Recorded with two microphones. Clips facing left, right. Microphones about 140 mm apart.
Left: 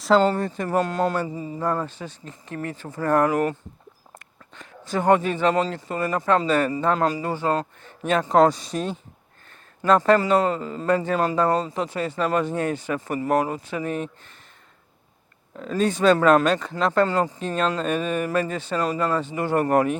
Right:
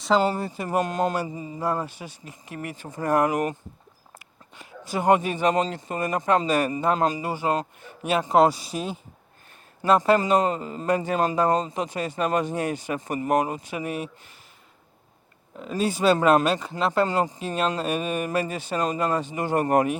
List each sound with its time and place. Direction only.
0.2 s speech: 10° right (ahead or behind)
15.5 s speech: 15° right (ahead or behind)